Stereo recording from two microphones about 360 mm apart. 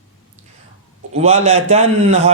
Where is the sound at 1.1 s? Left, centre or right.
Centre.